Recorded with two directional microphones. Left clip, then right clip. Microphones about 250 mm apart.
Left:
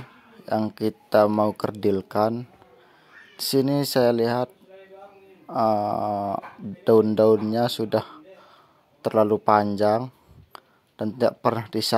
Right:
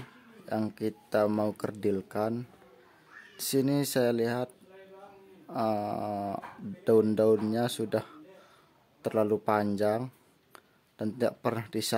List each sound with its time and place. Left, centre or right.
0.5 s speech: centre
0.7 s speech: centre
3.3 s speech: centre
5.5 s speech: centre